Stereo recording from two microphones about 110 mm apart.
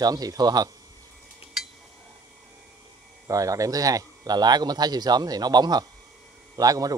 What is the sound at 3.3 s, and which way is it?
Speech, 30° right (ahead or behind).